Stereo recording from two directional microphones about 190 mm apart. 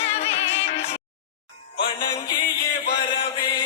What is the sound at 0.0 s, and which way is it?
Music, 35° left (ahead or behind).